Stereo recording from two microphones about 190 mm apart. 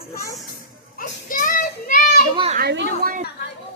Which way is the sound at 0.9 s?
45° left (ahead or behind).